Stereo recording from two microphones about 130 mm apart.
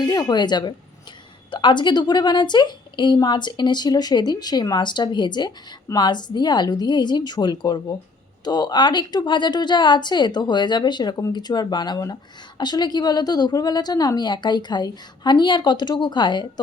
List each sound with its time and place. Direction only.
0.0 s a woman's voice: 30° left (ahead or behind)